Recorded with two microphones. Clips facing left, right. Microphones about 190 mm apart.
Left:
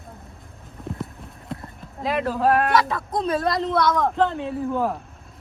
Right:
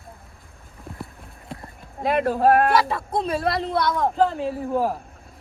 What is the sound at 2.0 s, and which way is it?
Speech, 55° right (ahead or behind).